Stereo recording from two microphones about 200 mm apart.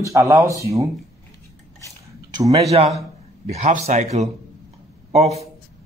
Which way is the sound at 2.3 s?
15° right (ahead or behind).